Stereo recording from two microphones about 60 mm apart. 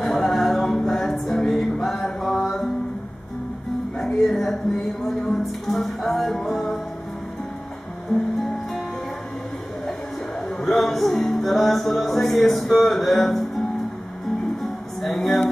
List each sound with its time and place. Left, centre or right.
0.0 s music: centre
4.2 s speech: centre
8.1 s music: centre
10.6 s music: centre
14.6 s music: centre